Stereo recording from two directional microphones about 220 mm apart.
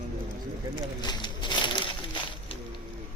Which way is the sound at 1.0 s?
20° left (ahead or behind).